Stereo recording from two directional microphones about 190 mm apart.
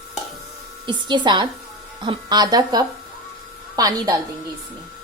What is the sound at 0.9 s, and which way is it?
A woman's voice, 25° right (ahead or behind).